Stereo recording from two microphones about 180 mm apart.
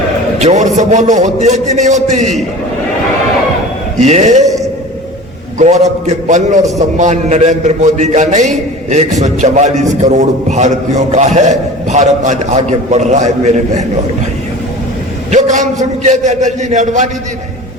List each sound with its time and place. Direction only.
0.3 s a man's voice: 40° right (ahead or behind)
4.0 s a man's voice: 40° right (ahead or behind)
5.5 s a man's voice: 40° right (ahead or behind)
15.3 s a man's voice: 40° right (ahead or behind)